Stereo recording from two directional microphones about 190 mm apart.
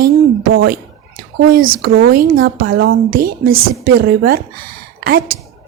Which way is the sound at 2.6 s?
90° right.